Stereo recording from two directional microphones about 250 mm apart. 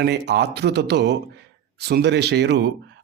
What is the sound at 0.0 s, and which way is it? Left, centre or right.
Speech, right.